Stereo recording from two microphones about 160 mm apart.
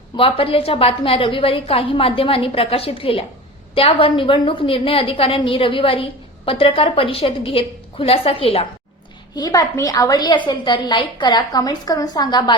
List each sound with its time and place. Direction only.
0.2 s a woman's voice: 35° left (ahead or behind)
9.3 s a woman's voice: 20° left (ahead or behind)